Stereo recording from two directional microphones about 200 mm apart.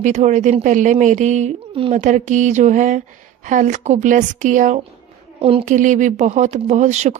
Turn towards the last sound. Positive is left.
turn(degrees=-35)  # may be behind; listen again after turning